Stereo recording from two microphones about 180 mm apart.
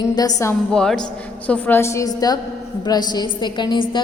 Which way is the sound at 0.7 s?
5° left (ahead or behind).